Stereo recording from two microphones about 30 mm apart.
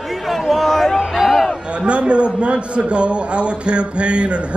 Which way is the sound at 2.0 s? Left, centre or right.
Right.